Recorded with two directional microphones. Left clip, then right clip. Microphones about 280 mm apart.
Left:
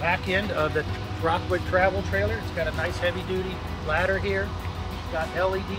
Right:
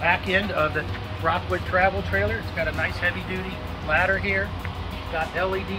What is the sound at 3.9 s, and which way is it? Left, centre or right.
Speech, centre.